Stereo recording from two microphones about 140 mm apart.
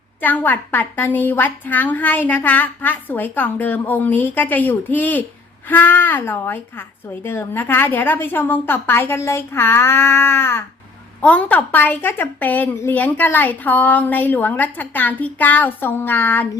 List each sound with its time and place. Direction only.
0.2 s a woman's voice: 15° left (ahead or behind)